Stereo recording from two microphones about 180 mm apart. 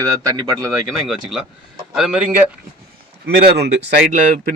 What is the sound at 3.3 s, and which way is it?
Speech, 60° right (ahead or behind).